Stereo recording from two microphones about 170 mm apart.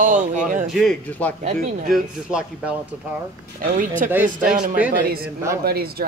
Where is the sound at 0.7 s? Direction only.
5° left (ahead or behind).